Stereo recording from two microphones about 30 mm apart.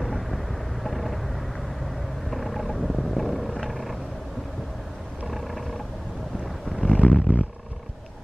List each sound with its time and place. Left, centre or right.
0.0 s vehicle: centre
5.3 s roaring cats: centre
6.9 s a sound: right